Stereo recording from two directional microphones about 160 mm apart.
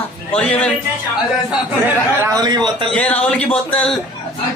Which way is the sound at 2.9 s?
10° left (ahead or behind).